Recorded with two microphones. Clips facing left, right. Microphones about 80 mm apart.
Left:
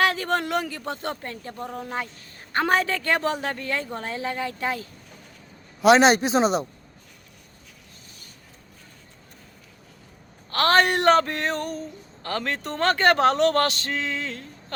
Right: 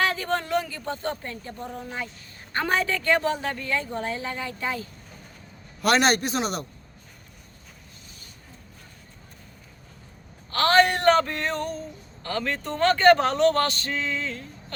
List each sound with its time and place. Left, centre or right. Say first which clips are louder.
0.0 s speech: left 3 dB; left
5.8 s a man's voice: left 5 dB; centre
10.6 s speech: even; left